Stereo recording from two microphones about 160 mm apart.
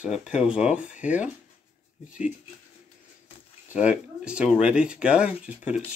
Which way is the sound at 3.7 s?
5° right (ahead or behind).